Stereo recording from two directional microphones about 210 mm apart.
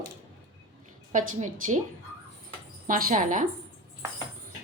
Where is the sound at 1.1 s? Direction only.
35° right (ahead or behind).